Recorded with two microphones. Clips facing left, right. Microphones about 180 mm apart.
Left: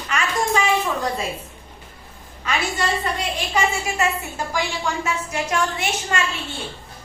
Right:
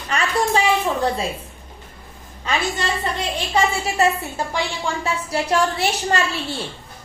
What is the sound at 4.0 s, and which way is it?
A woman's voice, 35° right (ahead or behind).